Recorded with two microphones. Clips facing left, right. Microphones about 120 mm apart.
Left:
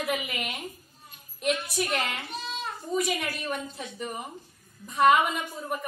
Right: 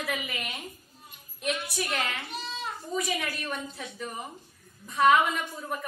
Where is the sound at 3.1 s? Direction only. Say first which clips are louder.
Left 1 dB; 10° left (ahead or behind).